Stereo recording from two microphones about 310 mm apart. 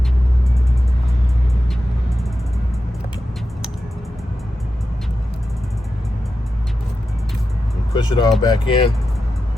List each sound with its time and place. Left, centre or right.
7.9 s speech: centre